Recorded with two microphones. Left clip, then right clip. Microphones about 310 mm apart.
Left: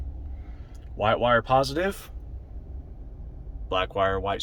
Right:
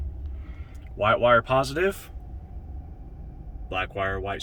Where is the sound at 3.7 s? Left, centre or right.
Centre.